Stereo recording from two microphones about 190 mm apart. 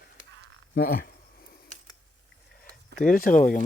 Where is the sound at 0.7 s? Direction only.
50° left (ahead or behind).